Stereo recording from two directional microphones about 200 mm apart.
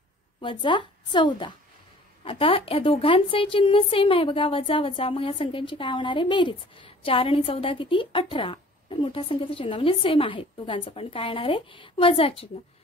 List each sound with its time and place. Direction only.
0.4 s a woman's voice: 25° left (ahead or behind)